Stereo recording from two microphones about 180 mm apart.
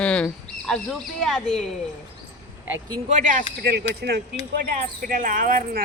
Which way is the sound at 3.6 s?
65° right (ahead or behind).